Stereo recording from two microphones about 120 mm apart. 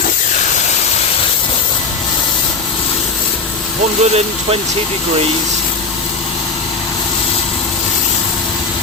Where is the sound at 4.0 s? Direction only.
60° right (ahead or behind).